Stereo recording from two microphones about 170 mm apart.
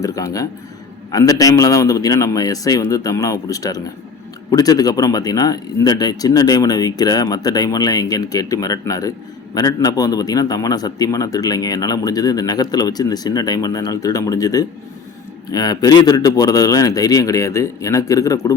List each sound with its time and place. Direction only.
0.0 s a man's voice: 20° left (ahead or behind)